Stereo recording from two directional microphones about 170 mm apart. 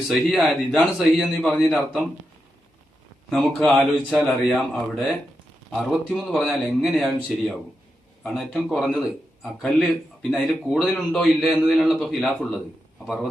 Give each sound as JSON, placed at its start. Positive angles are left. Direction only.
{"t": 0.1, "sound": "a man's voice", "side_deg": 0}
{"t": 3.2, "sound": "a man's voice", "side_deg": 0}